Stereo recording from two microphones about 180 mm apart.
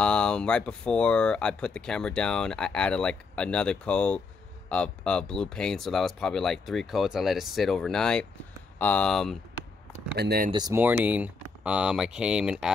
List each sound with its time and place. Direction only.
0.0 s speech: 5° left (ahead or behind)
10.1 s speech: 60° right (ahead or behind)
10.5 s speech: 20° right (ahead or behind)
10.8 s speech: 10° right (ahead or behind)